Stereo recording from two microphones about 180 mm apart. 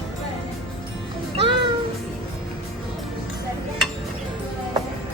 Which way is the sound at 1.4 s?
30° right (ahead or behind).